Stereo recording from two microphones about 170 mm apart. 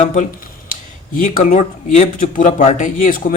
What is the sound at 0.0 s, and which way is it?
A man's voice, 45° left (ahead or behind).